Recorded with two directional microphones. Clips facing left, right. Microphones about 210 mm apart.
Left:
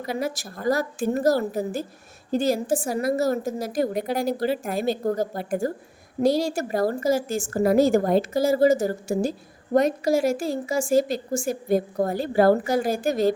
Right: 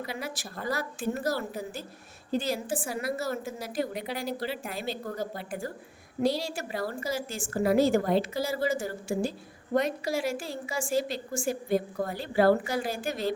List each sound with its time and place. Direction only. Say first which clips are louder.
0.0 s a woman's voice: left 8 dB; 45° left (ahead or behind)